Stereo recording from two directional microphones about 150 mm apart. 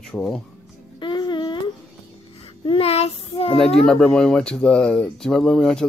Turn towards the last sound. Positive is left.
turn(degrees=5)  # may be behind; listen again after turning